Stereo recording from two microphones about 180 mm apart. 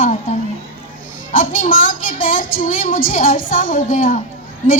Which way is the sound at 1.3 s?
50° left (ahead or behind).